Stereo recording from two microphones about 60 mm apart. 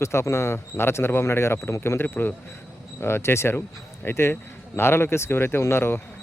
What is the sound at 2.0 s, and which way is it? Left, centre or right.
Speech, left.